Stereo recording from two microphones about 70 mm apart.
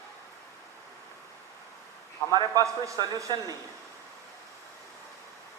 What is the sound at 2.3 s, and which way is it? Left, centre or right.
Speech, right.